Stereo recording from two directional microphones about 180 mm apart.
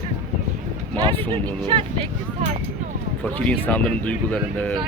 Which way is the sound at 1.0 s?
25° right (ahead or behind).